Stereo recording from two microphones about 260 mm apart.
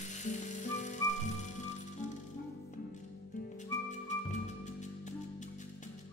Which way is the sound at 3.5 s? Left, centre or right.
Left.